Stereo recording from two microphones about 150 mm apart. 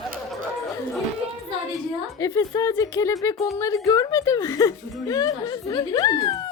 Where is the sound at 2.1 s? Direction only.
25° left (ahead or behind).